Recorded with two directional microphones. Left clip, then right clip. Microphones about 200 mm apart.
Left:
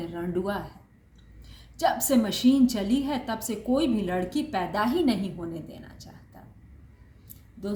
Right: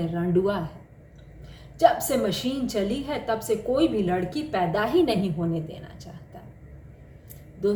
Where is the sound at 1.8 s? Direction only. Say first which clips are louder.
Right 4 dB; 20° left (ahead or behind).